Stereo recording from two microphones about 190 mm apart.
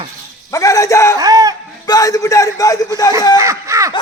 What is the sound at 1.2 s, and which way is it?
Speech, 20° right (ahead or behind).